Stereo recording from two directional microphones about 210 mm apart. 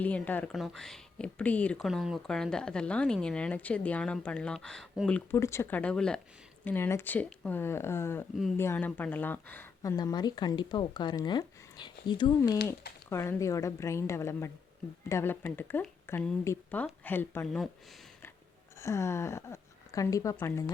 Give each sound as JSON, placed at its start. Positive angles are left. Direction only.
{"t": 0.0, "sound": "speech", "side_deg": 10}
{"t": 18.8, "sound": "speech", "side_deg": 15}